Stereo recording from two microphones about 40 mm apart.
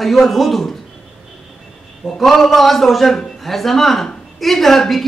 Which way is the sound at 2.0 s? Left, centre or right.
Centre.